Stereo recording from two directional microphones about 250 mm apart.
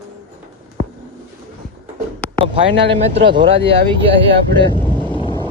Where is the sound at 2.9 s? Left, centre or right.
Right.